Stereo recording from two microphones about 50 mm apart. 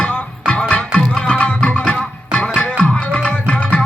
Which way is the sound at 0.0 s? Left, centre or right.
Left.